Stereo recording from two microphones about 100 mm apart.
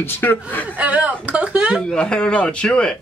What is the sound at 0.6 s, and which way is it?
Speech, 15° right (ahead or behind).